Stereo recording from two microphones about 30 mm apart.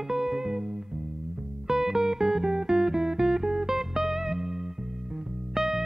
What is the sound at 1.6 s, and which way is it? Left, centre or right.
Music, centre.